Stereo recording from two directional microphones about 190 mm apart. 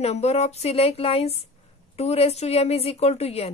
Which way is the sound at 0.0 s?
35° left (ahead or behind).